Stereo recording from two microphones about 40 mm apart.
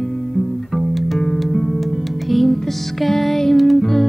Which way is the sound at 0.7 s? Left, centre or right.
Centre.